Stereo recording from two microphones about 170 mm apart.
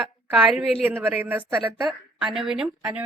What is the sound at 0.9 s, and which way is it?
Speech, 15° right (ahead or behind).